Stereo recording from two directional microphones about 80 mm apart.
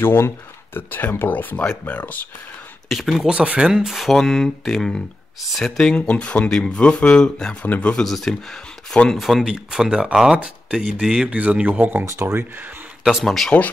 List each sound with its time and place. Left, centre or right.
0.0 s speech: left
2.9 s speech: centre
7.6 s speech: left
7.9 s speech: centre
9.2 s speech: centre
11.2 s speech: centre
12.0 s speech: right
13.0 s speech: centre